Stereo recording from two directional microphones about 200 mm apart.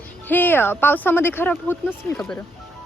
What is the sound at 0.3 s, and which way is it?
Speech, 10° left (ahead or behind).